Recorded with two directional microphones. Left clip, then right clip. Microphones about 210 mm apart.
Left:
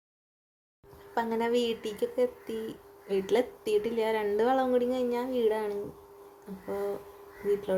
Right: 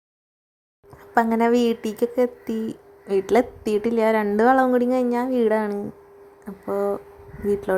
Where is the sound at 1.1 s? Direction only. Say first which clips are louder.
Right 9 dB; 30° right (ahead or behind).